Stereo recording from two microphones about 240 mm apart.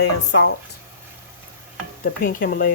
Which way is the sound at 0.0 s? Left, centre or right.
Left.